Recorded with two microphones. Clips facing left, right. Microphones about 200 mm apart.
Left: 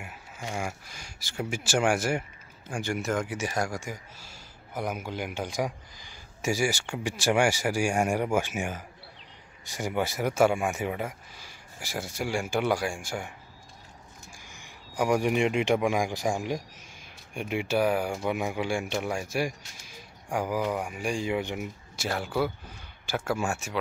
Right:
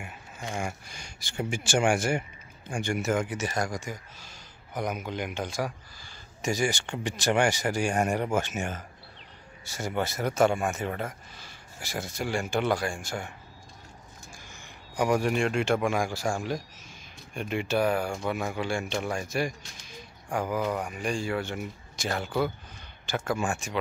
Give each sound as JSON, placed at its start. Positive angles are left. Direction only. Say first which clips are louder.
{"t": 0.0, "sound": "speech", "louder": "even", "side_deg": 5}
{"t": 3.3, "sound": "speech", "louder": "even", "side_deg": 10}
{"t": 14.5, "sound": "speech", "louder": "right 1 dB", "side_deg": 10}